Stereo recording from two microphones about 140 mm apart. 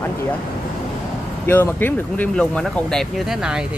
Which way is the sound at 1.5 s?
15° left (ahead or behind).